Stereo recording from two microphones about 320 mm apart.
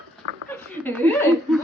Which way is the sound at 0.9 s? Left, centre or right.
Centre.